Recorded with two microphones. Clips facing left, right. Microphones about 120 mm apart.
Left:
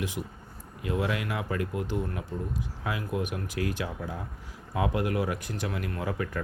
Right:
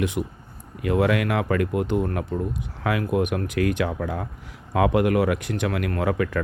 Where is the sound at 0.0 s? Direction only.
65° right (ahead or behind).